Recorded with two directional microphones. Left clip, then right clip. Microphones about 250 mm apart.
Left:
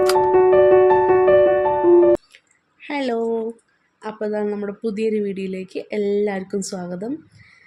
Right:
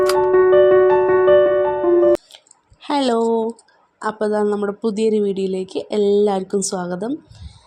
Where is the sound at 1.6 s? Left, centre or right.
Centre.